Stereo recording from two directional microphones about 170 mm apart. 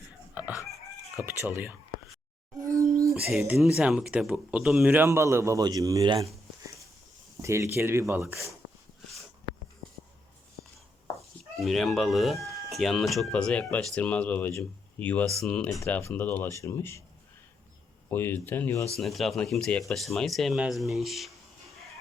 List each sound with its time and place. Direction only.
0.5 s chicken: 20° left (ahead or behind)
1.2 s a man's voice: 15° right (ahead or behind)
2.6 s a sound: 20° right (ahead or behind)
3.1 s a man's voice: 5° right (ahead or behind); by 6.2 s 20° right (ahead or behind)
7.4 s a man's voice: 15° right (ahead or behind)
9.5 s writing: 30° left (ahead or behind)
11.6 s speech: centre (ahead or behind)
18.1 s speech: 15° left (ahead or behind)
18.9 s speech: centre (ahead or behind)